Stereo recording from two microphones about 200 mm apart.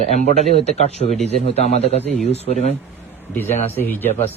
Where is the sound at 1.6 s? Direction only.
30° left (ahead or behind).